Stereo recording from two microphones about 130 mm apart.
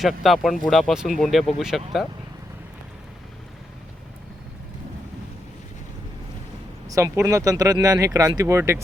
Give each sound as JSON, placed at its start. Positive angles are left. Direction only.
{"t": 0.0, "sound": "speech", "side_deg": 0}
{"t": 6.8, "sound": "speech", "side_deg": -25}